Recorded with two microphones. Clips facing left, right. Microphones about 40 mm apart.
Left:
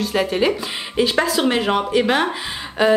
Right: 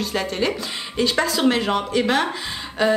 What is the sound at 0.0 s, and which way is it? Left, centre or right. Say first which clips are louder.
Speech: left 4 dB; centre.